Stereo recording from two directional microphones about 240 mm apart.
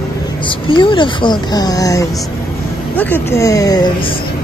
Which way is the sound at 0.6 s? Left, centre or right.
Left.